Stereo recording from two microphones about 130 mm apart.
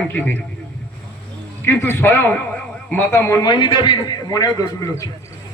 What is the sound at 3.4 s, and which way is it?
A man's voice, 35° left (ahead or behind).